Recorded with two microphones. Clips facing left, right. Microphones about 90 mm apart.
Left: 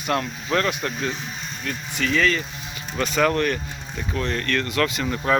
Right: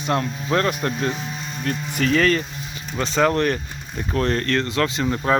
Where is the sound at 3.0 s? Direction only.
30° right (ahead or behind).